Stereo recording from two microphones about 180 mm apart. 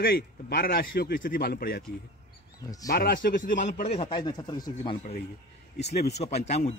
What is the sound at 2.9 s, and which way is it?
Speech, 55° left (ahead or behind).